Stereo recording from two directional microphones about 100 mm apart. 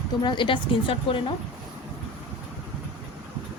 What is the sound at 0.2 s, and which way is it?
Speech, 55° left (ahead or behind).